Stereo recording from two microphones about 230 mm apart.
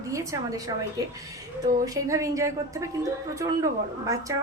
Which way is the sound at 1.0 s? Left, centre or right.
Centre.